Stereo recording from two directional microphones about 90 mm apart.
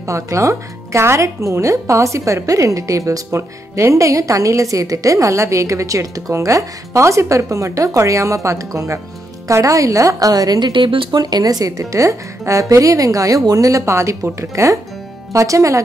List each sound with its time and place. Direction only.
0.0 s speech: 35° right (ahead or behind)